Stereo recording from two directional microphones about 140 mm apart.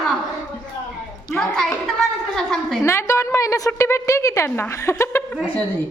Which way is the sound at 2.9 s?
20° left (ahead or behind).